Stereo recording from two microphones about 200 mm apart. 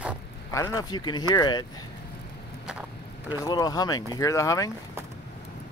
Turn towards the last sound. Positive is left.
turn(degrees=15)  # may be behind; listen again after turning